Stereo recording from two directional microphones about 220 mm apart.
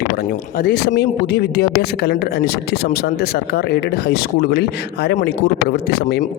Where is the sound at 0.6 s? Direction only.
45° left (ahead or behind).